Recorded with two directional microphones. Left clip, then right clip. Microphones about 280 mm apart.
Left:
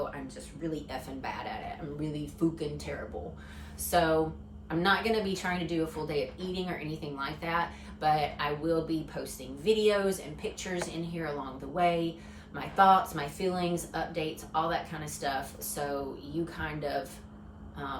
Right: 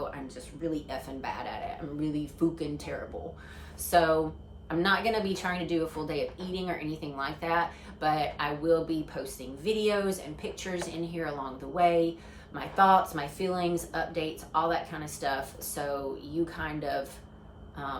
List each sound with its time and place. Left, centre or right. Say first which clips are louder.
0.6 s a woman's voice: right 3 dB; centre